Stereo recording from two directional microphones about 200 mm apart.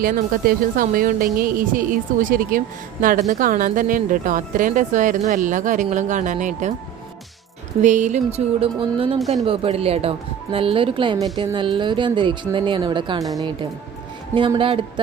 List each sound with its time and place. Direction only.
0.0 s a woman's voice: 45° right (ahead or behind)
7.8 s speech: 35° right (ahead or behind)
9.1 s speech: centre (ahead or behind)
9.4 s speech: 30° right (ahead or behind)
14.3 s speech: 25° right (ahead or behind)